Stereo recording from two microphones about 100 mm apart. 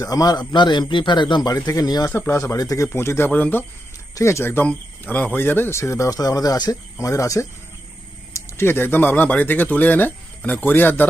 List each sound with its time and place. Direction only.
0.0 s speech: 40° left (ahead or behind)
1.5 s speech: 35° left (ahead or behind)
2.0 s speech: 25° left (ahead or behind)